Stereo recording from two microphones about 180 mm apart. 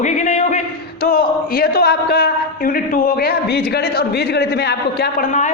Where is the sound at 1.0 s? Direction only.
55° left (ahead or behind).